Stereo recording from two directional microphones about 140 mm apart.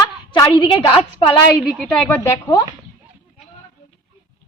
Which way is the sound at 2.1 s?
25° left (ahead or behind).